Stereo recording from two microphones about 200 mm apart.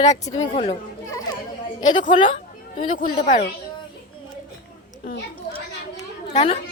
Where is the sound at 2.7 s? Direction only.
45° left (ahead or behind).